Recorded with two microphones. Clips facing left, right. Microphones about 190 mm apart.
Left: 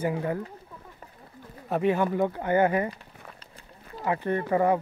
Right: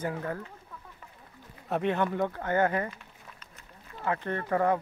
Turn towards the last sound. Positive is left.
turn(degrees=10)  # may be behind; listen again after turning